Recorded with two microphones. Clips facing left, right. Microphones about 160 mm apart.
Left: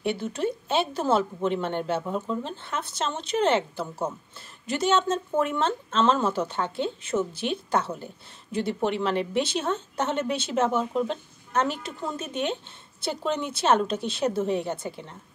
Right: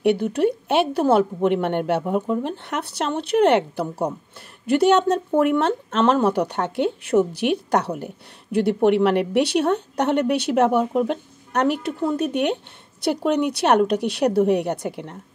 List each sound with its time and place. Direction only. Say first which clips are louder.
0.0 s a woman's voice: right 8 dB; 65° right (ahead or behind)
2.0 s speech: right 6 dB; 15° right (ahead or behind)
2.4 s a woman's voice: right 6 dB; 70° right (ahead or behind)